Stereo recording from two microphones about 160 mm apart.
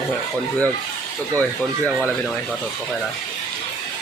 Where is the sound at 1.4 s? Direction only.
10° left (ahead or behind).